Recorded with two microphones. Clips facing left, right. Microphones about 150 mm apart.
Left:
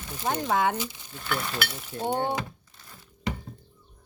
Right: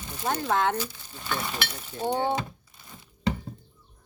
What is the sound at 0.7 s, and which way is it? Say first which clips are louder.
Speech: right 1 dB; 20° left (ahead or behind).